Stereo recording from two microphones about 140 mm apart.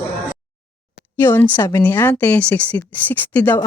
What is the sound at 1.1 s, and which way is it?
Speech, 15° left (ahead or behind).